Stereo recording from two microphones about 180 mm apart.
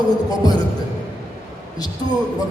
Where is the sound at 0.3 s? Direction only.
20° left (ahead or behind).